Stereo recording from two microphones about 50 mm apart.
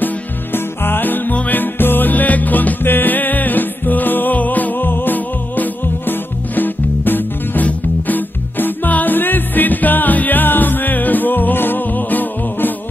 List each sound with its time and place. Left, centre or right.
0.0 s music: left